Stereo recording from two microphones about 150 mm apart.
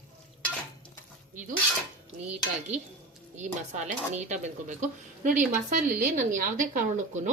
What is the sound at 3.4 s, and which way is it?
Speech, 50° right (ahead or behind).